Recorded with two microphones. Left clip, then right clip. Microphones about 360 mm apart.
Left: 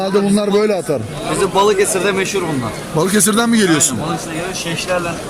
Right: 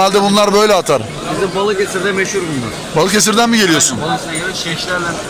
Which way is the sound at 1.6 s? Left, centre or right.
Centre.